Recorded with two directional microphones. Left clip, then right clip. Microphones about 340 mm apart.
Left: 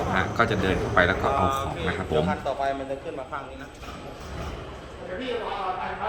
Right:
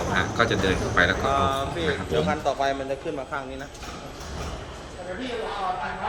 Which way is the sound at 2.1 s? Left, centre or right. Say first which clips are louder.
Right 1 dB; right.